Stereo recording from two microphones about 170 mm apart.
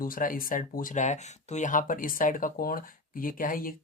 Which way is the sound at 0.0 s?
55° left (ahead or behind).